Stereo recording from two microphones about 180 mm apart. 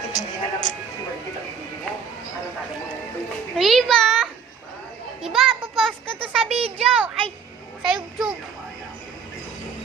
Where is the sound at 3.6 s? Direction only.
Centre (ahead or behind).